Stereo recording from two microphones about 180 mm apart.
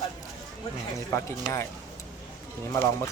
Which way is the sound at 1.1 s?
15° left (ahead or behind).